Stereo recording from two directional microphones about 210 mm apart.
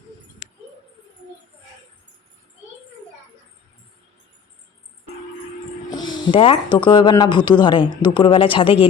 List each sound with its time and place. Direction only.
5.9 s speech: 20° left (ahead or behind)